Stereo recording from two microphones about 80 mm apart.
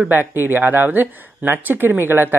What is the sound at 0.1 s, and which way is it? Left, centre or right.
Speech, right.